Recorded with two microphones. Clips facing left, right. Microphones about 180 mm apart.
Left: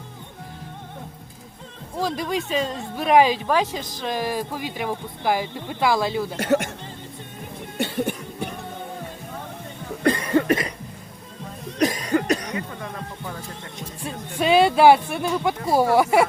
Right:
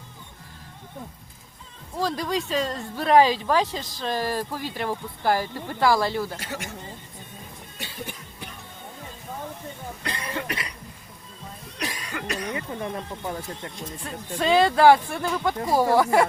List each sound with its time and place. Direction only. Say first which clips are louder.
2.0 s speech: left 1 dB; 20° left (ahead or behind)
6.4 s speech: left 14 dB; 60° left (ahead or behind)
7.8 s cough: left 13 dB; 65° left (ahead or behind)
10.0 s cough: left 13 dB; 50° left (ahead or behind)
11.8 s cough: left 12 dB; 45° left (ahead or behind)
12.5 s music: right 1 dB; 20° right (ahead or behind)
14.0 s speech: left 3 dB; 15° left (ahead or behind)